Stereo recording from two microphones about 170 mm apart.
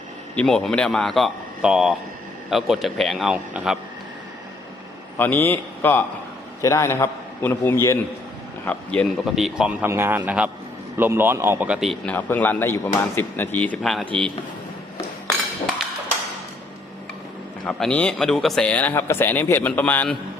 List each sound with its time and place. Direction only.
0.3 s a man's voice: 5° left (ahead or behind)
5.1 s a man's voice: 10° left (ahead or behind)
17.7 s a man's voice: 5° left (ahead or behind)